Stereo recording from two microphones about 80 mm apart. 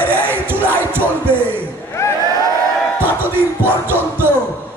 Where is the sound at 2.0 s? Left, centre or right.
Left.